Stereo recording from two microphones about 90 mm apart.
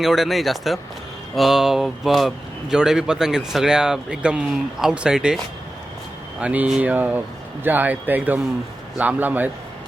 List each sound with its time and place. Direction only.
0.0 s speech: 5° right (ahead or behind)
6.4 s a man's voice: 15° right (ahead or behind)